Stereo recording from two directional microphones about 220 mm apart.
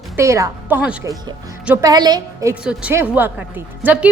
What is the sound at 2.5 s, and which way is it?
A woman's voice, 5° right (ahead or behind).